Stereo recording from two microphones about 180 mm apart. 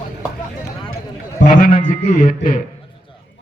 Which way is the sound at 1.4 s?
50° left (ahead or behind).